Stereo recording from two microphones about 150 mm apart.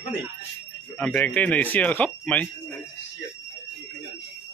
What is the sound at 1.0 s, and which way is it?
Speech, 10° left (ahead or behind).